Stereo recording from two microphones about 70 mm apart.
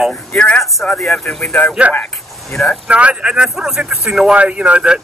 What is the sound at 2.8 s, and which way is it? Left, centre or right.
Speech, centre.